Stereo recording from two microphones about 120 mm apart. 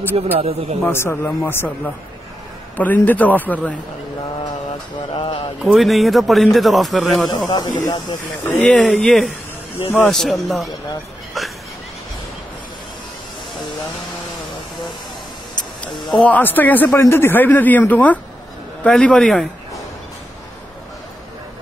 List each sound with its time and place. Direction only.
0.1 s speech: 60° right (ahead or behind)
0.9 s speech: 20° left (ahead or behind)
2.8 s speech: 15° left (ahead or behind)
5.1 s speech: 45° left (ahead or behind)
5.6 s a man's voice: centre (ahead or behind)
7.2 s speech: 35° left (ahead or behind)
8.5 s a man's voice: 10° left (ahead or behind)
11.4 s a sound: centre (ahead or behind)
15.8 s a man's voice: 10° left (ahead or behind)